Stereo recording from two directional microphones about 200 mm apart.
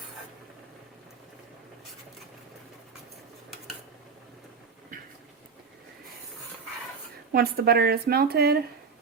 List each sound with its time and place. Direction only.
7.3 s speech: 50° right (ahead or behind)